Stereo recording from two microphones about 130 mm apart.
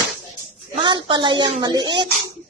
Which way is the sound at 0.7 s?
35° right (ahead or behind).